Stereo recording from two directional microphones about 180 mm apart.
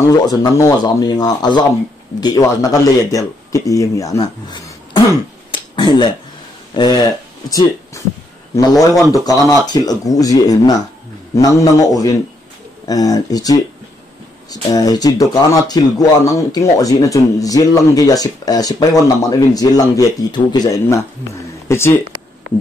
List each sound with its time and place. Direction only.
0.0 s speech: 20° left (ahead or behind)
5.5 s finger snapping: 25° left (ahead or behind)
6.7 s speech: 25° left (ahead or behind)
9.1 s speech: 20° left (ahead or behind)